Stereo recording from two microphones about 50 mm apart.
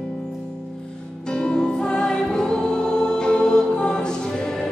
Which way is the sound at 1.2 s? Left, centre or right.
Centre.